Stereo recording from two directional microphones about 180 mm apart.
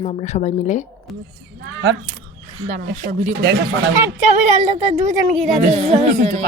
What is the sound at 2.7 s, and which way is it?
Speech, 50° right (ahead or behind).